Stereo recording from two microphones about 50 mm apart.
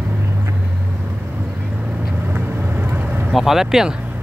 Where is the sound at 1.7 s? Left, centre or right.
Right.